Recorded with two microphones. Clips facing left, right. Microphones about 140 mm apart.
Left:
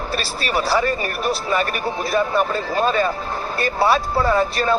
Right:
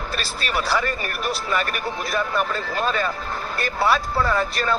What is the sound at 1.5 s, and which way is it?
Speech, 25° left (ahead or behind).